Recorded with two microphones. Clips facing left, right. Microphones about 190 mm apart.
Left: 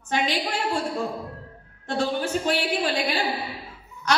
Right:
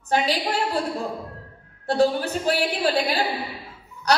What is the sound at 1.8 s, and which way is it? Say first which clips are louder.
A woman's voice: right 5 dB; 35° right (ahead or behind).